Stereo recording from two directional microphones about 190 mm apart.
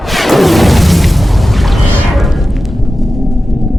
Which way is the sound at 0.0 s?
Centre (ahead or behind).